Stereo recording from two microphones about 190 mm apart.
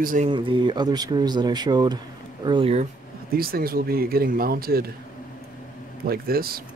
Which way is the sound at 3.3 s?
50° right (ahead or behind).